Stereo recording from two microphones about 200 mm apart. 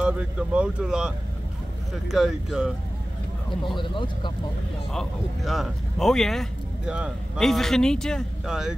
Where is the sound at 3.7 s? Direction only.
25° left (ahead or behind).